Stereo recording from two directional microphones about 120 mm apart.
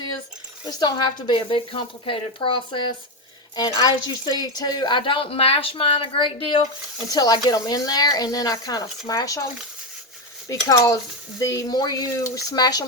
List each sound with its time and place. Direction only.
0.7 s speech: 35° left (ahead or behind)
3.5 s speech: 35° left (ahead or behind)
7.1 s speech: 35° left (ahead or behind)
10.7 s speech: 25° left (ahead or behind)